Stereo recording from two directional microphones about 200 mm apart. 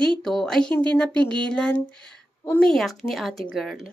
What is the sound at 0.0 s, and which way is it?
A woman's voice, 5° left (ahead or behind).